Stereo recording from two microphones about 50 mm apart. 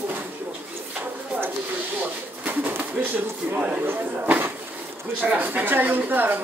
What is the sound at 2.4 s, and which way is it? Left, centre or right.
Pigeon, right.